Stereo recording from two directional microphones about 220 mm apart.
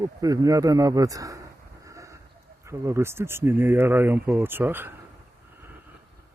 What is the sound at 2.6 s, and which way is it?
Speech, 15° right (ahead or behind).